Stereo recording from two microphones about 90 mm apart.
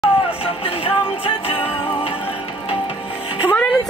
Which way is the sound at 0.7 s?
90° left.